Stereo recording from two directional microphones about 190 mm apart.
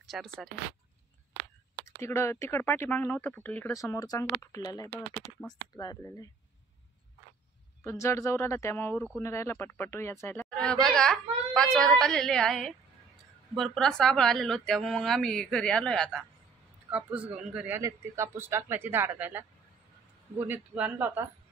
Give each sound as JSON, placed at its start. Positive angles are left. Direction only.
{"t": 0.0, "sound": "speech", "side_deg": 0}
{"t": 2.0, "sound": "speech", "side_deg": 15}
{"t": 7.8, "sound": "a woman's voice", "side_deg": 15}